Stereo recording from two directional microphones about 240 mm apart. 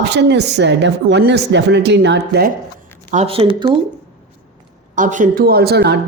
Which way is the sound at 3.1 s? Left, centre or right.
Right.